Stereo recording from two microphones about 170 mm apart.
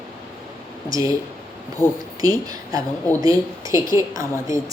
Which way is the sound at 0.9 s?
20° right (ahead or behind).